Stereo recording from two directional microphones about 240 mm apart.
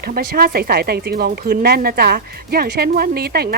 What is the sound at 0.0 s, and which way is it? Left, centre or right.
Speech, right.